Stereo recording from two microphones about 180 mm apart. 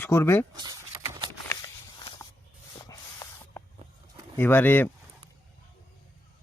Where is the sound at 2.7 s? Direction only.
20° left (ahead or behind).